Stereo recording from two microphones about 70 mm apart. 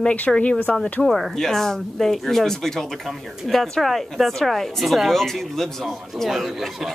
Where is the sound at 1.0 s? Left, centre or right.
Centre.